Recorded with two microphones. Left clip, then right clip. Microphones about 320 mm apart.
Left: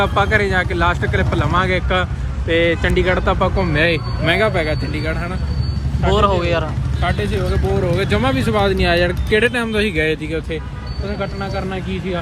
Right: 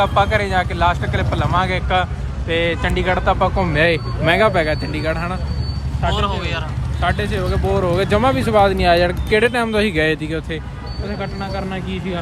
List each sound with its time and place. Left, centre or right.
0.0 s speech: right
6.0 s a man's voice: centre